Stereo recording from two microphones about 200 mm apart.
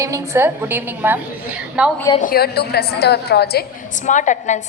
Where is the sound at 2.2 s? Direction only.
50° left (ahead or behind).